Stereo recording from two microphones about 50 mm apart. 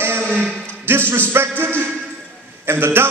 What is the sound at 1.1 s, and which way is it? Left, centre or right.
A man's voice, right.